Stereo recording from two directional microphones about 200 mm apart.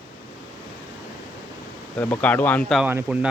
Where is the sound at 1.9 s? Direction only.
10° left (ahead or behind).